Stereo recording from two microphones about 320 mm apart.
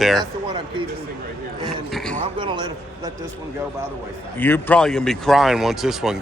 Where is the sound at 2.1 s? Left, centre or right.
Centre.